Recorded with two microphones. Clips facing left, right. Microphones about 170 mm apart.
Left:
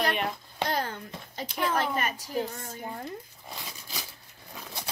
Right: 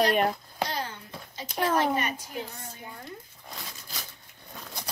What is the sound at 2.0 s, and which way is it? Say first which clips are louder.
Speech: left 2 dB; 40° left (ahead or behind).